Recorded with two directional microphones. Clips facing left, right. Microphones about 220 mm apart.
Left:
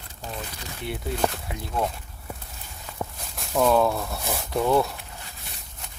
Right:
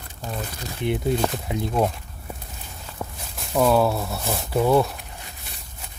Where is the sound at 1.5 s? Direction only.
25° right (ahead or behind).